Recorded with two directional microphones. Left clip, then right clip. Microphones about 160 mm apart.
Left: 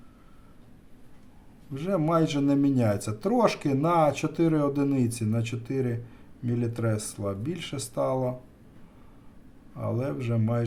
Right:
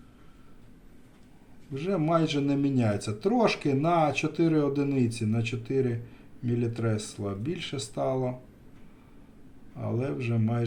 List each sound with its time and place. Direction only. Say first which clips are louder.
1.7 s a man's voice: left 1 dB; 25° left (ahead or behind)
9.7 s a man's voice: left 1 dB; 25° left (ahead or behind)